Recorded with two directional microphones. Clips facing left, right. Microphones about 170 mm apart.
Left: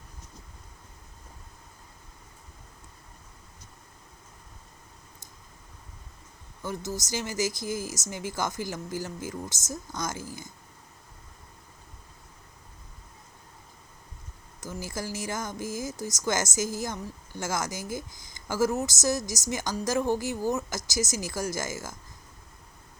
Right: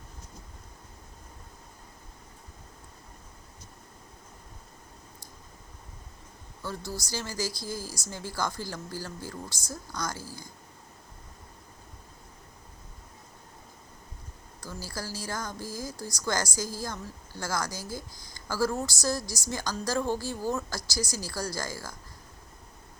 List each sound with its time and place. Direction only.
6.6 s speech: 20° left (ahead or behind)
14.6 s speech: 20° left (ahead or behind)